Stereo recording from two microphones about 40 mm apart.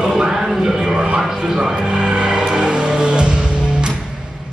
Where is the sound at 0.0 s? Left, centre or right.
Centre.